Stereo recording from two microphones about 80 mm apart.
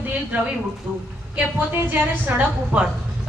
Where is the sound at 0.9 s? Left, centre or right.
Right.